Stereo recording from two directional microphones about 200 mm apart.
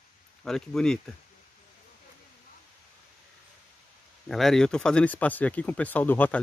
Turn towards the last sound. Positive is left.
turn(degrees=10)  # may be behind; listen again after turning